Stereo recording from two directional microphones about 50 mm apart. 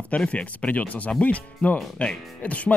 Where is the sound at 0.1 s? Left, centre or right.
Left.